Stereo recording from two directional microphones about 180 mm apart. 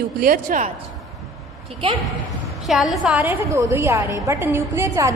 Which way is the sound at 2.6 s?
Centre (ahead or behind).